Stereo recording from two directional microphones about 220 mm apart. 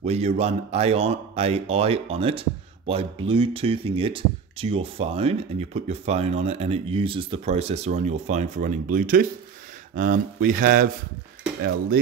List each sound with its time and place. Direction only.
0.0 s speech: 30° right (ahead or behind)